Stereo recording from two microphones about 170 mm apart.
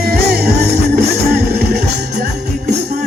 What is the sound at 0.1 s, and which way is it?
Music, 65° right (ahead or behind).